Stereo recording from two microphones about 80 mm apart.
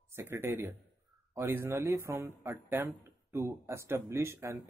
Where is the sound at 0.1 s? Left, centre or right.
Right.